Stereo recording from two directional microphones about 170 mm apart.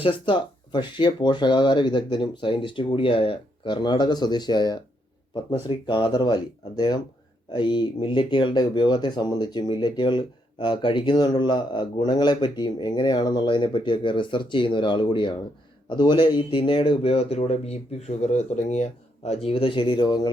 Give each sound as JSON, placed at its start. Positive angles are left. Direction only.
{"t": 0.0, "sound": "speech", "side_deg": 30}